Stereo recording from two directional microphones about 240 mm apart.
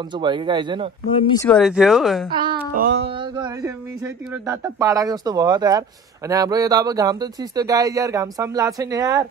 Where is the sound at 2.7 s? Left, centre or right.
Right.